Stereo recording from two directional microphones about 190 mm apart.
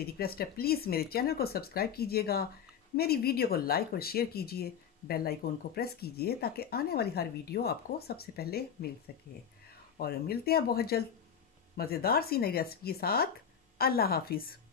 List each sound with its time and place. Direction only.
0.0 s speech: 55° left (ahead or behind)
9.9 s speech: 55° left (ahead or behind)